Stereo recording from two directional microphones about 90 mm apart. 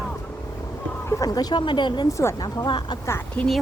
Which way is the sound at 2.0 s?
35° left (ahead or behind).